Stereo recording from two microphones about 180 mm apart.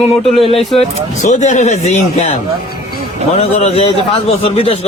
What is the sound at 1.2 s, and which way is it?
Speech, 40° left (ahead or behind).